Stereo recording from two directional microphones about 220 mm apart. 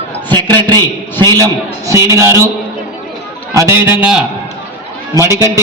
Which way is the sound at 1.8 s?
10° right (ahead or behind).